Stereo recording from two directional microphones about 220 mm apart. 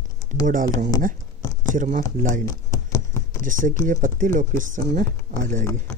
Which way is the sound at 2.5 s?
15° left (ahead or behind).